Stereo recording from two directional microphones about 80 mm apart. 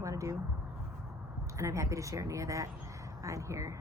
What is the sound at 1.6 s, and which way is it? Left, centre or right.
Speech, right.